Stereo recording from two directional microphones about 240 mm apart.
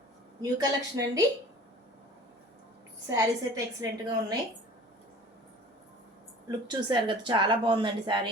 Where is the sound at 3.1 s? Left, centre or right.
Centre.